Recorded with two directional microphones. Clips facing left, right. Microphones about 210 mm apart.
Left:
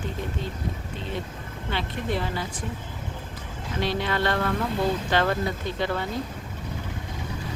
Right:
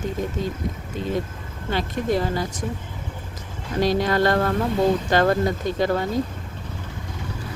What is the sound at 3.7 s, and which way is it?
Speech, 40° right (ahead or behind).